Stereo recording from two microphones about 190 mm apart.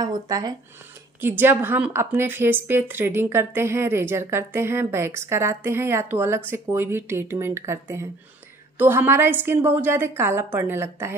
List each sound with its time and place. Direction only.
0.0 s speech: 20° right (ahead or behind)
1.2 s a woman's voice: 10° right (ahead or behind)